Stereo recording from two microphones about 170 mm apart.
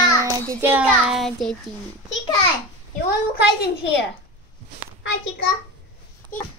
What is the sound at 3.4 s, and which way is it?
Speech, 85° left.